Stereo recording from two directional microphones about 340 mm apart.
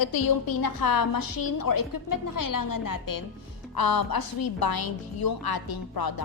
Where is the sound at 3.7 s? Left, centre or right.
Left.